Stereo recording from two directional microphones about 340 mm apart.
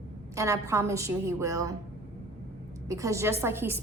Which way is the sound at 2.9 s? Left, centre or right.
Centre.